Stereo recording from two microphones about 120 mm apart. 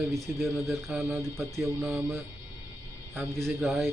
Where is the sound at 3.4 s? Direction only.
Centre (ahead or behind).